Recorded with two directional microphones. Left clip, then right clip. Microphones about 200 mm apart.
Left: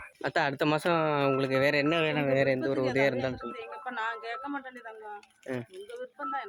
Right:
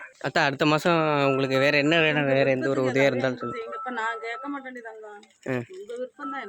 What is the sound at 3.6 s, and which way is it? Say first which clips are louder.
Speech: right 3 dB; 5° right (ahead or behind).